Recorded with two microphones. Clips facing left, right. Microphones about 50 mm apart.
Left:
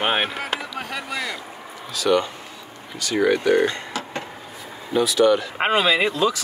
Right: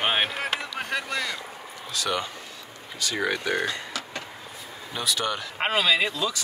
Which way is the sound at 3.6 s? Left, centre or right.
Left.